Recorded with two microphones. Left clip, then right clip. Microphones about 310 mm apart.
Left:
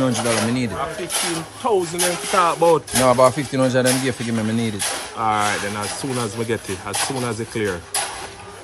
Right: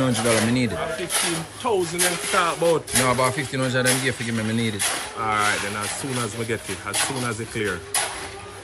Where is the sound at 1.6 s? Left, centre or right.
Left.